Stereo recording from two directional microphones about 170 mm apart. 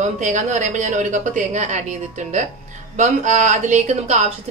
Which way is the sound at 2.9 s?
45° right (ahead or behind).